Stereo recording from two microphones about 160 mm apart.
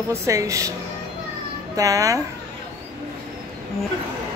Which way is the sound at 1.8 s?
20° right (ahead or behind).